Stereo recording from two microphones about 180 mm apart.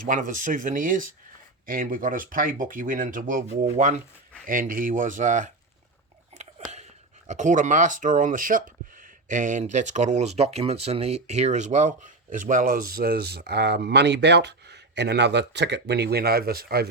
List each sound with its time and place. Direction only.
0.0 s speech: 45° right (ahead or behind)
6.3 s chewing: 40° right (ahead or behind)
7.3 s speech: 45° right (ahead or behind)